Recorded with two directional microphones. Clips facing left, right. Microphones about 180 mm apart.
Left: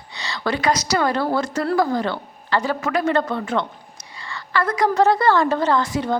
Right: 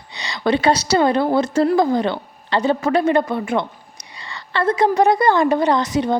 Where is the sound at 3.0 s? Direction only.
15° right (ahead or behind).